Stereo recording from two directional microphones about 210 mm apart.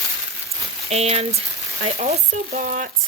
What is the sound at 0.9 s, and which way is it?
Speech, 30° right (ahead or behind).